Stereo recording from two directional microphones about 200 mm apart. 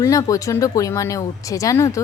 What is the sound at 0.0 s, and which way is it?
Speech, 15° left (ahead or behind).